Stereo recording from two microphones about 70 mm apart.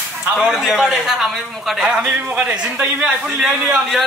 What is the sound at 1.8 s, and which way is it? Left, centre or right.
A man's voice, centre.